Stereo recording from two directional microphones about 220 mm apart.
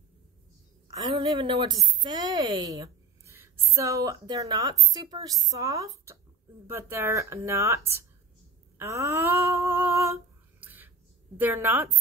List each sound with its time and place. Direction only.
0.9 s a woman's voice: 20° right (ahead or behind)
8.7 s a sound: 15° right (ahead or behind)
10.6 s whispering: 10° right (ahead or behind)
11.3 s speech: 10° right (ahead or behind)